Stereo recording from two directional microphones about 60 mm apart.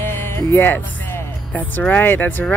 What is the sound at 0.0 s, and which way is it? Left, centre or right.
Music, left.